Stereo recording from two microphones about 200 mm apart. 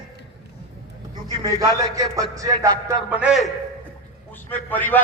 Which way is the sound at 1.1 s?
20° right (ahead or behind).